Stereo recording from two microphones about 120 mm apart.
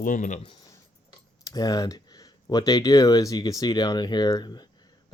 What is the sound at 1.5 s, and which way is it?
Speech, 30° left (ahead or behind).